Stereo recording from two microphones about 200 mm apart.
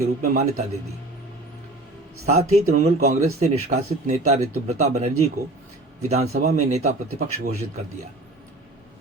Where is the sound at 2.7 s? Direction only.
35° right (ahead or behind).